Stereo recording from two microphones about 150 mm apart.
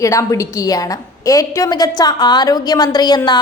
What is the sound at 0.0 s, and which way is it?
A woman's voice, 20° left (ahead or behind).